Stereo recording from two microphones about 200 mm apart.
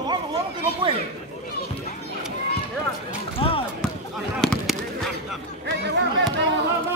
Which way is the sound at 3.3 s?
25° left (ahead or behind).